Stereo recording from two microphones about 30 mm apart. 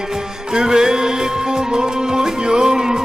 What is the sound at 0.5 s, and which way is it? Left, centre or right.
Music, right.